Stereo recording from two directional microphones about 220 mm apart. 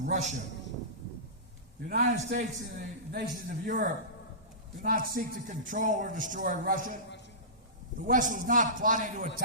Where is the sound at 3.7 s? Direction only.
40° right (ahead or behind).